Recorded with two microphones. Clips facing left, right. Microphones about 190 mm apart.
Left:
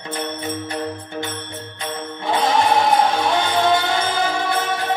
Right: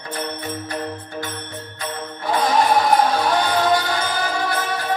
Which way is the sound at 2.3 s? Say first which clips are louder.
Even; 25° left (ahead or behind).